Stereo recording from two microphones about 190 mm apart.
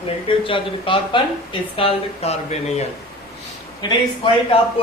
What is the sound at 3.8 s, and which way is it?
Speech, 25° left (ahead or behind).